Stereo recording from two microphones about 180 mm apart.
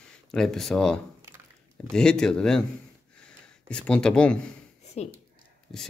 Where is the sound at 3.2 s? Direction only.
5° left (ahead or behind).